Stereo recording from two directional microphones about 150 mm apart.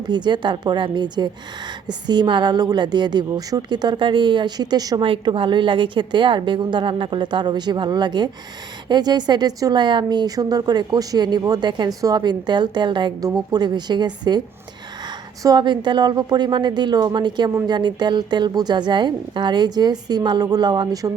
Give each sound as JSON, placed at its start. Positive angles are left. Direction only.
{"t": 0.1, "sound": "a woman's voice", "side_deg": -30}
{"t": 15.4, "sound": "speech", "side_deg": -30}